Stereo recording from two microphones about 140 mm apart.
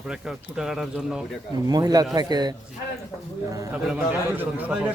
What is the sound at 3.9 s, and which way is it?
Speech, 10° right (ahead or behind).